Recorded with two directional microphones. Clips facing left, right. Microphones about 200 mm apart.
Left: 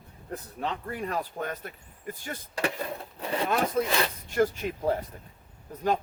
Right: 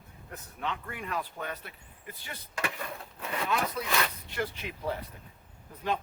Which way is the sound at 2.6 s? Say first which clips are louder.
Left 5 dB; 35° left (ahead or behind).